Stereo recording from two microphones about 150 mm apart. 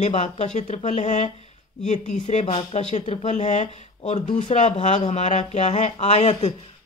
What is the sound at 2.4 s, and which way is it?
Speech, 40° left (ahead or behind).